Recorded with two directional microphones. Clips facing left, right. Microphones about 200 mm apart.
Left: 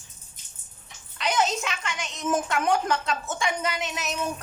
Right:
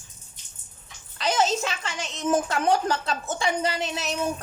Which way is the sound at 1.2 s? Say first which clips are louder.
Right 2 dB; 35° right (ahead or behind).